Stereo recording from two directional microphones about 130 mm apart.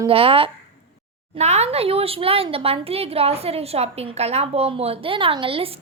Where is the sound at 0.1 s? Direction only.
45° right (ahead or behind).